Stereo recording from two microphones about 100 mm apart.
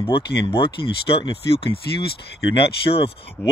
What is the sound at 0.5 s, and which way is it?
Speech, 60° left (ahead or behind).